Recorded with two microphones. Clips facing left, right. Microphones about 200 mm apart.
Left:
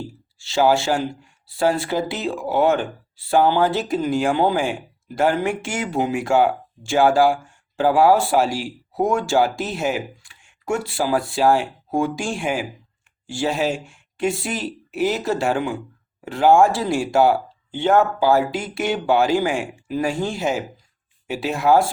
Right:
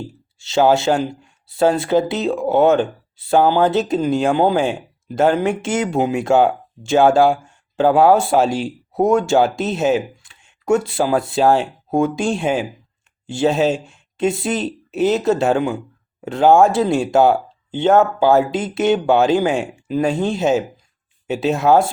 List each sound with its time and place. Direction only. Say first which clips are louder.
0.3 s speech: right 3 dB; 20° right (ahead or behind)